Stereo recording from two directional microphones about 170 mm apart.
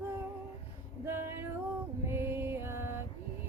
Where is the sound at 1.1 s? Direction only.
15° right (ahead or behind).